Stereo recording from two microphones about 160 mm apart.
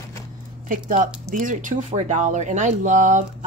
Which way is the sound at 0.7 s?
55° right (ahead or behind).